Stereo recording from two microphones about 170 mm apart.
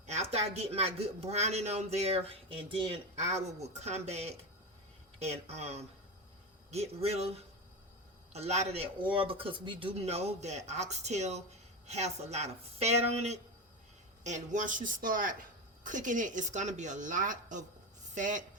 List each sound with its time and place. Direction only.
0.0 s a woman's voice: 40° right (ahead or behind)